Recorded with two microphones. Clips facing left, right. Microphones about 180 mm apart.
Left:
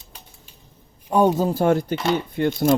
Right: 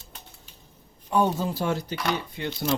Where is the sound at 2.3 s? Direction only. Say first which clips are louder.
Left 9 dB; 50° left (ahead or behind).